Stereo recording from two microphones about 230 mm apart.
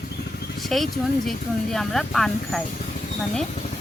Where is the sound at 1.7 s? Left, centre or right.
Centre.